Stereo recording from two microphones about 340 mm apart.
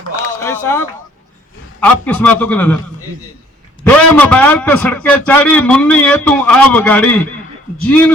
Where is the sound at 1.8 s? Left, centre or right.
Centre.